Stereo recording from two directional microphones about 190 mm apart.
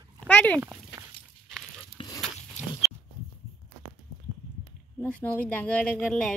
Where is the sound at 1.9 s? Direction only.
20° left (ahead or behind).